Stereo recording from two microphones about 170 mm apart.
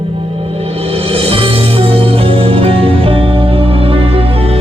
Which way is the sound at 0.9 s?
35° right (ahead or behind).